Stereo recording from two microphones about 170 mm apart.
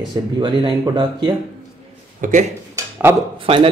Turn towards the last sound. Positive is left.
turn(degrees=-30)  # may be behind; listen again after turning